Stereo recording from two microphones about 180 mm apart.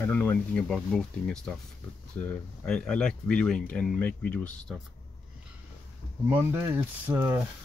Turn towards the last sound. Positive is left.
turn(degrees=-10)  # may be behind; listen again after turning